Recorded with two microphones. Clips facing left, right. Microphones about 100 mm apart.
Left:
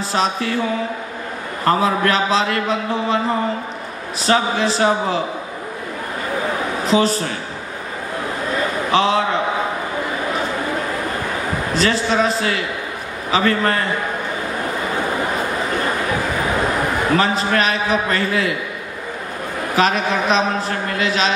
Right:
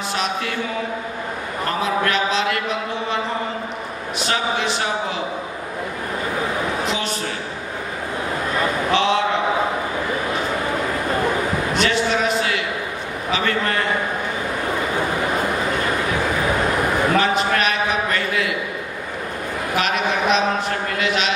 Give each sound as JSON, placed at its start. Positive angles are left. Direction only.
{"t": 0.1, "sound": "speech", "side_deg": 35}
{"t": 1.7, "sound": "speech", "side_deg": 35}
{"t": 4.2, "sound": "speech", "side_deg": 35}
{"t": 6.9, "sound": "speech", "side_deg": 35}
{"t": 8.9, "sound": "speech", "side_deg": 35}
{"t": 11.7, "sound": "a sound", "side_deg": 35}
{"t": 13.3, "sound": "speech", "side_deg": 35}
{"t": 17.2, "sound": "a man's voice", "side_deg": 35}
{"t": 19.7, "sound": "a sound", "side_deg": 35}